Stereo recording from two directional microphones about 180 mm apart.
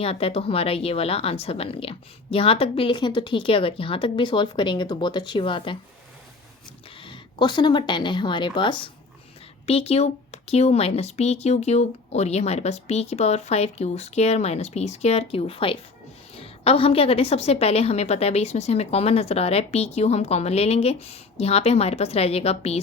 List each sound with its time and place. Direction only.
0.0 s speech: 30° left (ahead or behind)
6.9 s a woman's voice: 25° left (ahead or behind)